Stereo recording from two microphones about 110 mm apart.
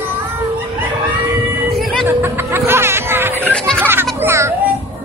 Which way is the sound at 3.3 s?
10° left (ahead or behind).